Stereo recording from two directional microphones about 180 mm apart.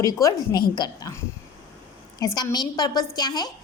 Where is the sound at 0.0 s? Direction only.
20° left (ahead or behind).